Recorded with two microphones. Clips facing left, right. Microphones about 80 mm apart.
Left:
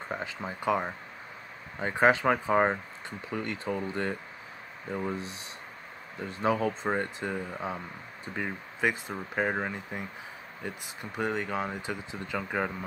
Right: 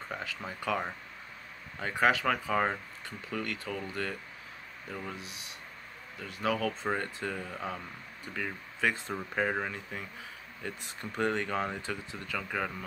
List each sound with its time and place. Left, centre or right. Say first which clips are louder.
0.1 s speech: left 4 dB; left